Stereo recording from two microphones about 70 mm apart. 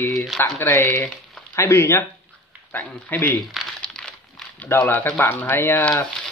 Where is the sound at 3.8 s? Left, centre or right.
Centre.